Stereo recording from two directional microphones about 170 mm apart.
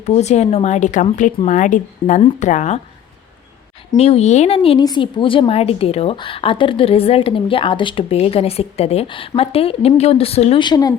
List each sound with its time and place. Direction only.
0.0 s a woman's voice: 40° left (ahead or behind)
3.9 s a woman's voice: 35° left (ahead or behind)